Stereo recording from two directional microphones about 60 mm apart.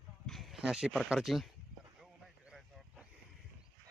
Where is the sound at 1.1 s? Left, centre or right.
Centre.